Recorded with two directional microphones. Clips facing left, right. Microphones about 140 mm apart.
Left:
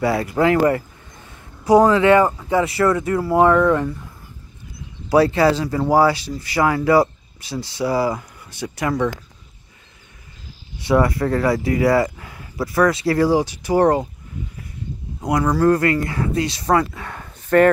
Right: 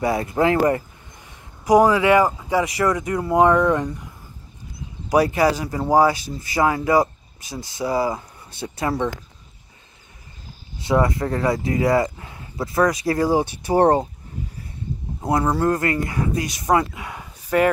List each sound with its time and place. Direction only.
0.0 s speech: 20° right (ahead or behind)
5.1 s speech: 15° right (ahead or behind)
10.8 s speech: 20° right (ahead or behind)
15.2 s speech: 25° right (ahead or behind)
16.3 s speech: 25° left (ahead or behind)
16.6 s speech: 15° right (ahead or behind)